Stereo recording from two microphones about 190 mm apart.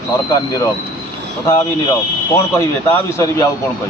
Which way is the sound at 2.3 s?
15° left (ahead or behind).